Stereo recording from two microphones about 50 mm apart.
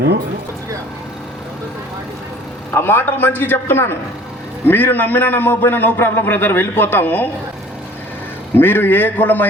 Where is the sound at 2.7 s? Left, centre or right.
Left.